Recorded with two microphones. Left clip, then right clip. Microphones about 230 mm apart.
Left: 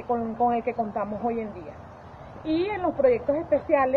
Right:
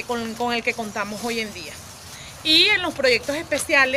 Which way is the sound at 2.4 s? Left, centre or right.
Right.